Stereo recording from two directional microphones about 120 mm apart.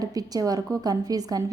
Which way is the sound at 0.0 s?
30° right (ahead or behind).